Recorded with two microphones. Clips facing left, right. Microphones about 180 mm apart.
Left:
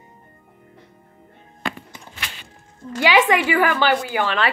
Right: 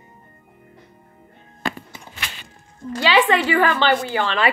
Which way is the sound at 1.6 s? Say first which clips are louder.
Right 2 dB; 40° right (ahead or behind).